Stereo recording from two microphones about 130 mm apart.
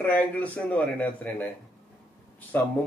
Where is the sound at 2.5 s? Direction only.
15° left (ahead or behind).